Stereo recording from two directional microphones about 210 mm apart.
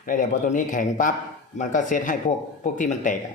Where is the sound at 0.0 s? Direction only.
40° left (ahead or behind).